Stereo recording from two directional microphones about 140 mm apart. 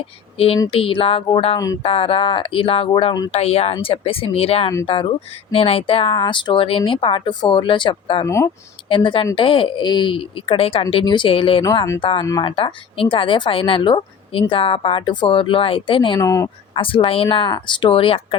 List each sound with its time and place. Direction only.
0.3 s speech: 45° left (ahead or behind)
1.5 s speech: 25° left (ahead or behind)
1.8 s speech: 40° left (ahead or behind)
8.2 s speech: 20° left (ahead or behind)
8.9 s speech: 35° left (ahead or behind)
11.6 s speech: 25° left (ahead or behind)
16.2 s speech: 25° left (ahead or behind)
16.7 s speech: 40° left (ahead or behind)